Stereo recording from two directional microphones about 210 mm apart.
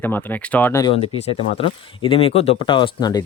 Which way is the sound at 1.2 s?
25° left (ahead or behind).